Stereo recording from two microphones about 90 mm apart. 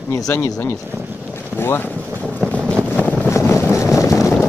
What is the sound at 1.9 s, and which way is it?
Boat, 25° right (ahead or behind).